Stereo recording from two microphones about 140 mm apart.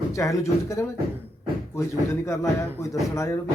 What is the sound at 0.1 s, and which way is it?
Speech, 20° left (ahead or behind).